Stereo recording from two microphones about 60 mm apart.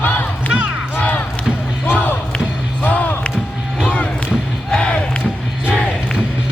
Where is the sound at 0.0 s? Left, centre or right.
Left; by 5.2 s centre.